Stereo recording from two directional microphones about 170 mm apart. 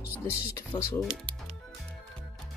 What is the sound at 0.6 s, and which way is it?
Speech, 15° left (ahead or behind).